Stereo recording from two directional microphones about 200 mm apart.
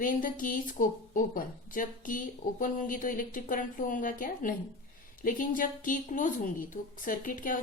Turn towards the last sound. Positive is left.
turn(degrees=45)  # may be behind; listen again after turning